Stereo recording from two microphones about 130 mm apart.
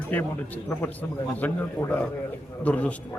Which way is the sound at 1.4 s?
15° left (ahead or behind).